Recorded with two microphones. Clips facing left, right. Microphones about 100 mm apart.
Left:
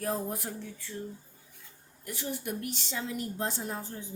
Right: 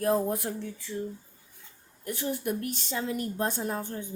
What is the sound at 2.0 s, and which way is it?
A woman's voice, 50° right (ahead or behind).